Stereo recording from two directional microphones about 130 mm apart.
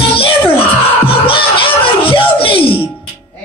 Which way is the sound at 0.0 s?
45° left (ahead or behind).